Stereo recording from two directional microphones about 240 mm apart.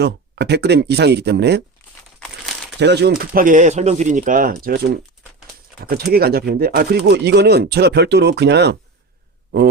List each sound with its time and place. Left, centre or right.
0.0 s speech: right
2.7 s speech: right
6.1 s speech: right